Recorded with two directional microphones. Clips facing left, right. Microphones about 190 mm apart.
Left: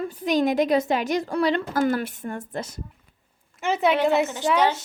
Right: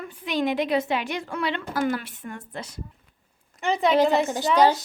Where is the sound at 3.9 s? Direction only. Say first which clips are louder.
Right 1 dB; 35° right (ahead or behind).